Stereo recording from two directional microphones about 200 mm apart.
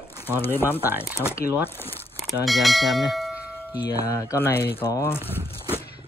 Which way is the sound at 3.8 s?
15° left (ahead or behind).